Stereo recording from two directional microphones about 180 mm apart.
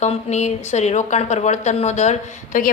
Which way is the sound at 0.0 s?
40° left (ahead or behind).